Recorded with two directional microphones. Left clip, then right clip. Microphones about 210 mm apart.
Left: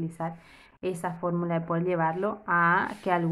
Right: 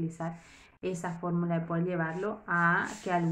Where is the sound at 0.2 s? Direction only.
25° left (ahead or behind).